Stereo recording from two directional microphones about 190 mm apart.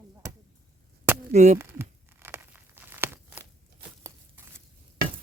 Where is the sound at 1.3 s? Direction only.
40° right (ahead or behind).